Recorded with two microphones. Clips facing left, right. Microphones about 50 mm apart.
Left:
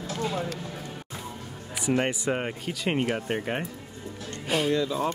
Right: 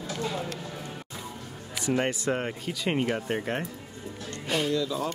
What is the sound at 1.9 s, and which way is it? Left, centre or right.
Speech, centre.